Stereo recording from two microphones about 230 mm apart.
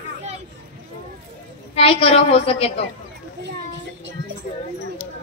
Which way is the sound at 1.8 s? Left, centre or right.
Left.